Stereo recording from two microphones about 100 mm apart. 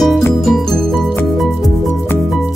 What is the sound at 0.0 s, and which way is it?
Music, centre (ahead or behind).